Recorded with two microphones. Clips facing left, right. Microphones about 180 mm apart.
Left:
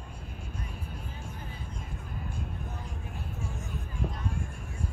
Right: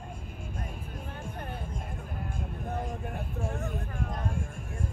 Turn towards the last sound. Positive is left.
turn(degrees=-55)  # may be behind; listen again after turning